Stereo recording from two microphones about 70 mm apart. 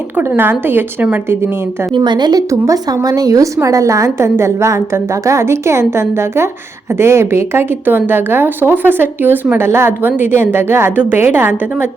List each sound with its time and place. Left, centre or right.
0.2 s speech: right
2.0 s a woman's voice: right
2.5 s a woman's voice: right